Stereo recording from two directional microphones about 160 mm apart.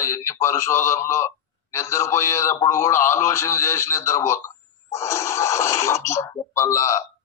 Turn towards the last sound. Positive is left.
turn(degrees=20)  # may be behind; listen again after turning